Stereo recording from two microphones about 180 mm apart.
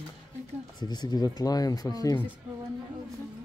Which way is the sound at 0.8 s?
25° left (ahead or behind).